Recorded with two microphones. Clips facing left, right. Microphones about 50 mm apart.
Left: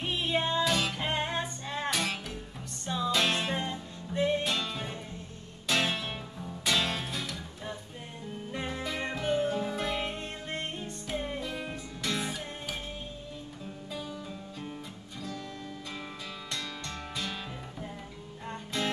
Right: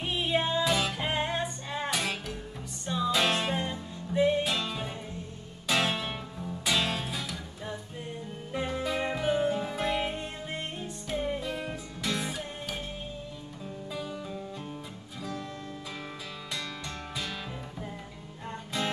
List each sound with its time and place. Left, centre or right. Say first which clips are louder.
0.0 s music: right 1 dB; centre
14.0 s music: right 3 dB; centre
18.5 s music: right 1 dB; centre